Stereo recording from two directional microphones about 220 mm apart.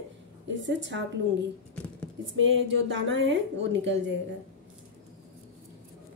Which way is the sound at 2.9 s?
60° right (ahead or behind).